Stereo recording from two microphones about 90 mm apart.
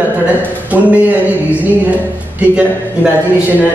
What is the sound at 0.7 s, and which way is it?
Speech, 20° right (ahead or behind).